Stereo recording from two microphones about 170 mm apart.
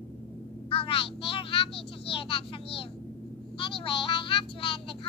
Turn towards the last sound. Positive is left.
turn(degrees=30)  # may be behind; listen again after turning